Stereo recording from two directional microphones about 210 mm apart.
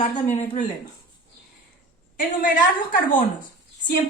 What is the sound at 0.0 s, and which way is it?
Speech, 35° left (ahead or behind).